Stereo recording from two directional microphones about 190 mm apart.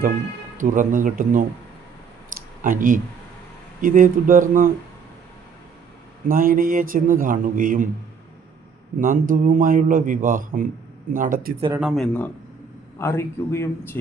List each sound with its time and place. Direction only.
0.5 s a man's voice: 40° right (ahead or behind)
2.3 s a sound: 45° right (ahead or behind)
3.8 s a man's voice: 45° right (ahead or behind)
6.2 s a man's voice: 45° right (ahead or behind)
9.0 s a man's voice: 45° right (ahead or behind)
11.8 s speech: centre (ahead or behind)
13.0 s a man's voice: 15° left (ahead or behind)